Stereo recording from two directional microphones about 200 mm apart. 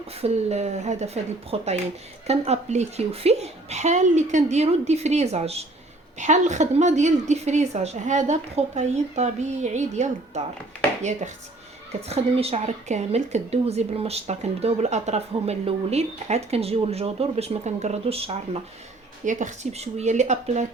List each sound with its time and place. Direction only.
0.1 s speech: 30° right (ahead or behind)
12.0 s speech: 30° right (ahead or behind)